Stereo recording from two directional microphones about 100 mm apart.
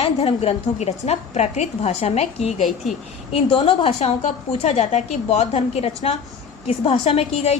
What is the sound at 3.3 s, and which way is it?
Speech, 70° left (ahead or behind).